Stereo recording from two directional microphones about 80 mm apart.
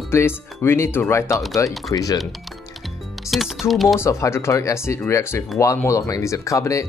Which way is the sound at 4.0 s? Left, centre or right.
Left.